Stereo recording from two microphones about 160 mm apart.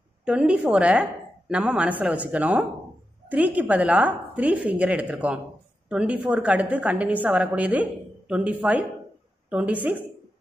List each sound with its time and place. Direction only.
0.2 s a woman's voice: 5° right (ahead or behind)